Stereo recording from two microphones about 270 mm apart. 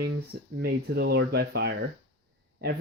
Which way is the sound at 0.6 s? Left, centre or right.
Right.